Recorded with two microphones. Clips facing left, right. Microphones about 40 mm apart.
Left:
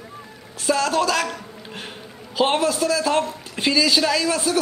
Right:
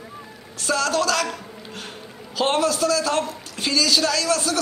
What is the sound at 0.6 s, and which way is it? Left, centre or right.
Speech, centre.